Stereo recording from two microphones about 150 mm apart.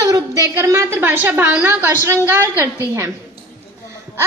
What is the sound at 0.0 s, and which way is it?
A woman's voice, 20° right (ahead or behind).